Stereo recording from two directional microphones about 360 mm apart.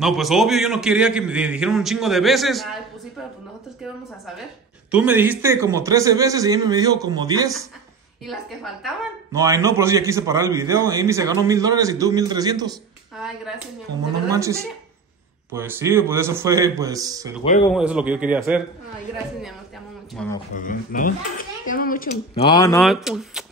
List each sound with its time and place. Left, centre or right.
0.0 s a man's voice: centre
4.9 s a woman's voice: centre
14.3 s a woman's voice: centre
20.2 s a man's voice: centre
20.5 s speech: left
22.3 s a man's voice: centre